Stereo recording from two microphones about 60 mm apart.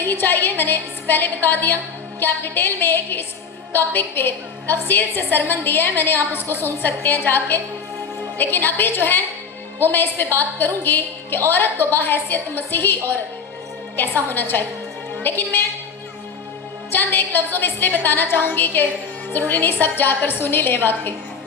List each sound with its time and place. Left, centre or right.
0.0 s a woman's voice: left
14.3 s a woman's voice: left
16.9 s a woman's voice: left